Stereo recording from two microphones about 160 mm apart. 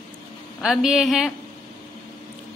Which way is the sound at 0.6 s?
Centre (ahead or behind).